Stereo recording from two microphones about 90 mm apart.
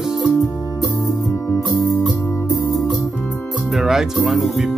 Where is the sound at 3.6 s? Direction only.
5° right (ahead or behind).